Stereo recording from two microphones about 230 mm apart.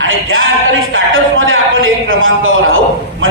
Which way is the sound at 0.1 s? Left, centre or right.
Right.